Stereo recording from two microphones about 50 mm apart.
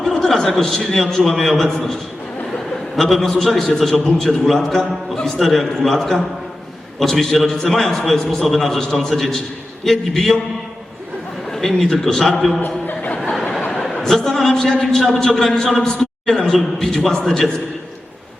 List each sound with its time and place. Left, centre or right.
0.1 s a man's voice: centre
11.4 s a man's voice: centre
12.6 s chuckle: left
13.8 s a man's voice: centre